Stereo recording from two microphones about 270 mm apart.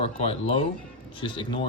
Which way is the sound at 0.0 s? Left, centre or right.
Left.